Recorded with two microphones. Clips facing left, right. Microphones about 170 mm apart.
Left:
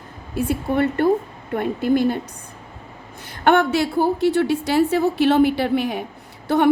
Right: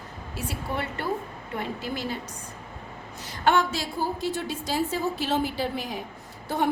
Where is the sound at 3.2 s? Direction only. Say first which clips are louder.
Left 6 dB; 60° left (ahead or behind).